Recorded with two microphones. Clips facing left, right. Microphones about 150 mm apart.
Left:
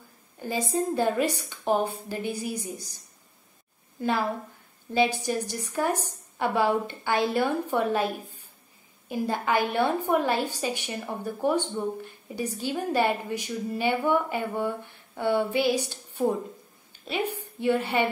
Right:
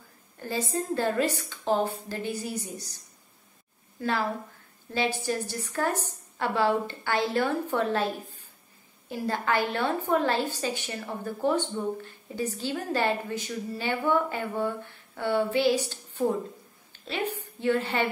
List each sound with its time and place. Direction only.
0.4 s a woman's voice: 15° left (ahead or behind)
4.0 s a woman's voice: 15° left (ahead or behind)